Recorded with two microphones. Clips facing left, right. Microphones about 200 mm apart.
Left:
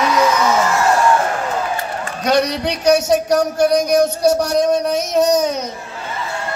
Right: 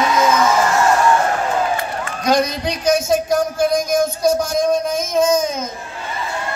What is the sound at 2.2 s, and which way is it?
A man's voice, 70° left (ahead or behind).